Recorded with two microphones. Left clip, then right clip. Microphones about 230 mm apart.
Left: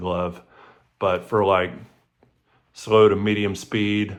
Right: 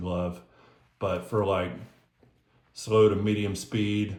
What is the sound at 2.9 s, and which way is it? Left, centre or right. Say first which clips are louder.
Speech: left 6 dB; centre.